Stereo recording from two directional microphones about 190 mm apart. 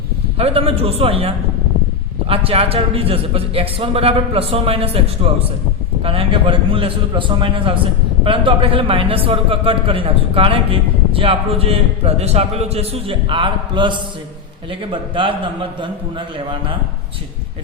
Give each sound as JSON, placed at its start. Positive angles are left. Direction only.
{"t": 0.3, "sound": "a man's voice", "side_deg": -30}
{"t": 2.3, "sound": "a man's voice", "side_deg": -30}